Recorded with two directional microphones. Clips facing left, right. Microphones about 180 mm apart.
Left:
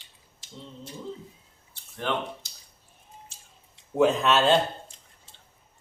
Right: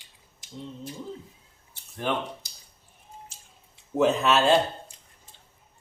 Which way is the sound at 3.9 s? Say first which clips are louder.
Even; centre (ahead or behind).